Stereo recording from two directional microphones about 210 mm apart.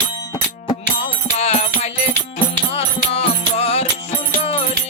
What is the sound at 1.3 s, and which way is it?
Music, 30° left (ahead or behind).